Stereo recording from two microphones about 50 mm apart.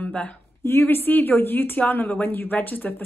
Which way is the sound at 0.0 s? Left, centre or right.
Left.